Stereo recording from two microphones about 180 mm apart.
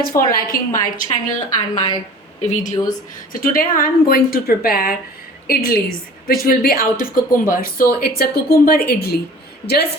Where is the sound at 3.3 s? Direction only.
50° left (ahead or behind).